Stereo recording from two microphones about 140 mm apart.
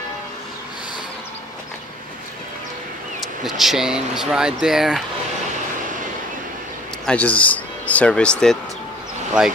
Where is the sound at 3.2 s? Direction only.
Centre (ahead or behind).